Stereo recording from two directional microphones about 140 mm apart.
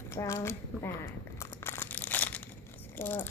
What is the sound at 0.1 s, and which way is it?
Speech, 20° left (ahead or behind).